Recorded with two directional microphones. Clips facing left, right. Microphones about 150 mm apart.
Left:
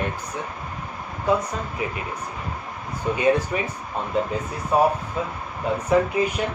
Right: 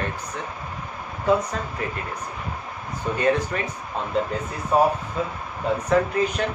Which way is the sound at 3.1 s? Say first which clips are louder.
Left 2 dB; 10° left (ahead or behind).